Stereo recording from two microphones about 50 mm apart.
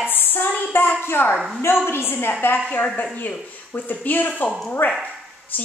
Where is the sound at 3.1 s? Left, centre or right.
Left.